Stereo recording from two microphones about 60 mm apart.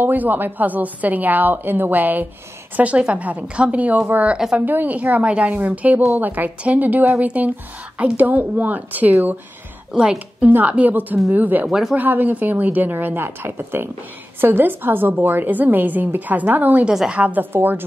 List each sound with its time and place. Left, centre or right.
0.0 s a woman's voice: right
16.8 s a woman's voice: centre
17.1 s a woman's voice: right